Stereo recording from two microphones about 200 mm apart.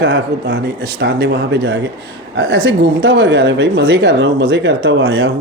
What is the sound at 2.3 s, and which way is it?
Speech, 70° right (ahead or behind).